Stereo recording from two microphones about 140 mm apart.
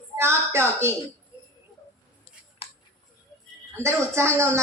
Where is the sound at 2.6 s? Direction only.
45° left (ahead or behind).